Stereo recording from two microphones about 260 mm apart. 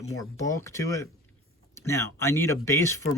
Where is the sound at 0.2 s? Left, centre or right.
Centre.